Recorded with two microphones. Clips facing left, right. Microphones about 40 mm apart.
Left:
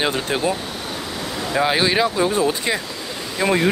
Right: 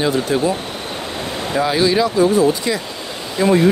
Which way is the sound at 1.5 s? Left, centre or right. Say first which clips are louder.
Right 2 dB; left.